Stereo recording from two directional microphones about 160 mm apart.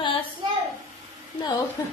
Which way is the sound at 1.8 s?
20° left (ahead or behind).